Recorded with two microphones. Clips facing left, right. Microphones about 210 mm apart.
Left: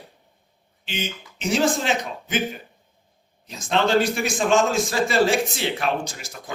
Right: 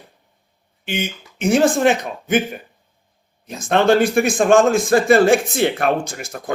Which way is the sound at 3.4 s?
55° right (ahead or behind).